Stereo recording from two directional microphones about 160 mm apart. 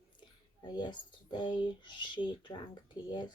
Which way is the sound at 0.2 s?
25° left (ahead or behind).